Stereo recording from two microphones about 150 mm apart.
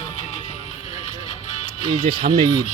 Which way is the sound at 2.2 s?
90° right.